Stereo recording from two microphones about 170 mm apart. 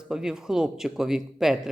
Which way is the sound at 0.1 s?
5° right (ahead or behind).